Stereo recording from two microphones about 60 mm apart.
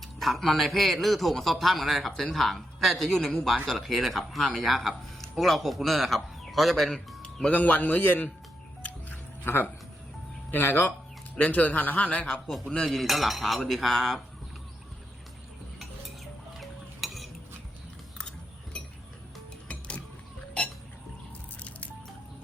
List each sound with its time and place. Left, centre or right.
0.0 s speech: centre
7.2 s music: centre
7.5 s speech: left
8.8 s music: left
10.5 s speech: left
12.3 s speech: centre
16.6 s music: centre
18.2 s a sound: centre
21.6 s squish: left